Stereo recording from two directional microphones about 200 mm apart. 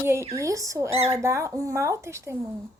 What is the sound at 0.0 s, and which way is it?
Speech, 15° right (ahead or behind).